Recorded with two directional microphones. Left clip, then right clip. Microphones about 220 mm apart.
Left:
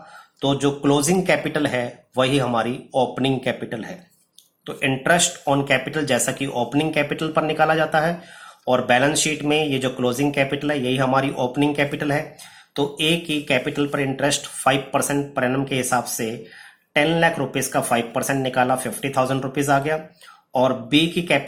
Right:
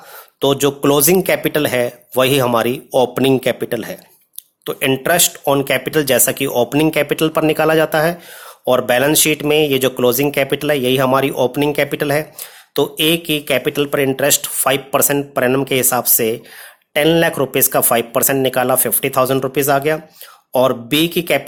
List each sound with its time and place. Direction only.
0.4 s speech: 45° right (ahead or behind)